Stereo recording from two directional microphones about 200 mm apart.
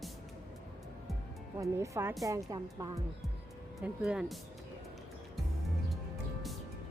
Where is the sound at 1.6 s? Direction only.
15° right (ahead or behind).